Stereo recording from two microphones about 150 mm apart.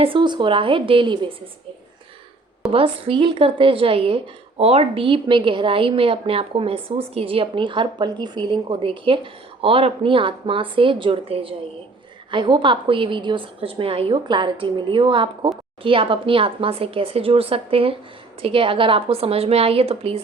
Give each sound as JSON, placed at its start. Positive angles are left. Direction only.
{"t": 0.0, "sound": "a woman's voice", "side_deg": -35}
{"t": 2.7, "sound": "a woman's voice", "side_deg": -35}